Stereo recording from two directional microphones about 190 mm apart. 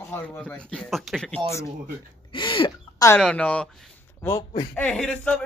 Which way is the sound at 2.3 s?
25° left (ahead or behind).